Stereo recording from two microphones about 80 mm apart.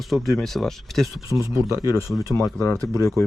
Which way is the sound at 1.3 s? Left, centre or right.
Right.